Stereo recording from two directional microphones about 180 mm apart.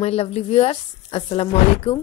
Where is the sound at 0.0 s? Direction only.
35° left (ahead or behind).